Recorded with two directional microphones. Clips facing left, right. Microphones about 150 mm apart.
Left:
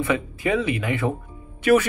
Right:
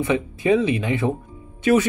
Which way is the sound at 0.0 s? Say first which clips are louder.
Right 2 dB; 20° right (ahead or behind).